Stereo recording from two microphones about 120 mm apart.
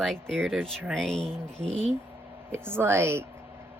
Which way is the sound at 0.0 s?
5° left (ahead or behind).